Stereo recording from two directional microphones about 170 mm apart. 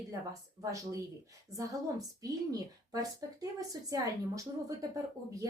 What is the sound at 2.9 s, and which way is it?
A woman's voice, 20° right (ahead or behind).